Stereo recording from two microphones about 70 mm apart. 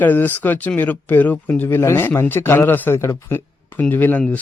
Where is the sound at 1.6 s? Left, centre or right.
Left.